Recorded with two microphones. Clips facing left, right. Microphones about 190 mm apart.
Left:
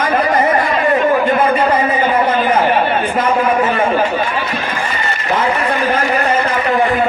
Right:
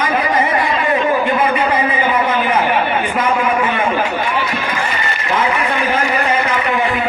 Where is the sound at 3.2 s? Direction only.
40° left (ahead or behind).